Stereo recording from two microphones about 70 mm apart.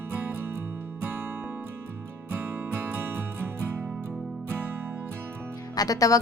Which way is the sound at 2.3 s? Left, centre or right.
Right.